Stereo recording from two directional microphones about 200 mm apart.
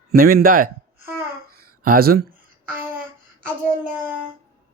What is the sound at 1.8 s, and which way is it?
Speech, 45° right (ahead or behind).